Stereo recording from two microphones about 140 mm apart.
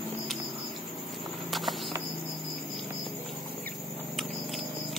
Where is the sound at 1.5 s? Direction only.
Centre (ahead or behind).